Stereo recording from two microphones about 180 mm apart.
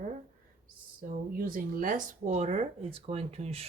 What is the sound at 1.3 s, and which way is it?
Speech, 50° right (ahead or behind).